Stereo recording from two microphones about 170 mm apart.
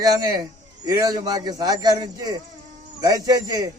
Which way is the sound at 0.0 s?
20° right (ahead or behind).